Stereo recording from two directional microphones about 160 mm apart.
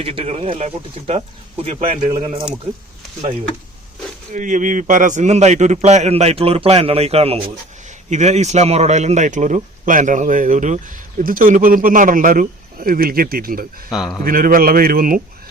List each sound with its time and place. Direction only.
0.0 s speech: 35° right (ahead or behind)
4.3 s a man's voice: 50° right (ahead or behind)
13.9 s a man's voice: centre (ahead or behind)
14.3 s a man's voice: 65° right (ahead or behind)